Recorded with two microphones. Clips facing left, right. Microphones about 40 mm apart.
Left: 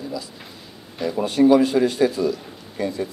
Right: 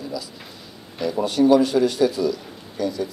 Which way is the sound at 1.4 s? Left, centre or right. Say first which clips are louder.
Left 1 dB; left.